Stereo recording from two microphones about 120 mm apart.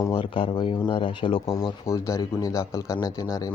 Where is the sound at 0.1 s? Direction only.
45° left (ahead or behind).